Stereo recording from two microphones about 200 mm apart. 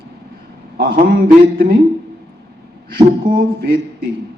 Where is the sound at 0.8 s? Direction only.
45° right (ahead or behind).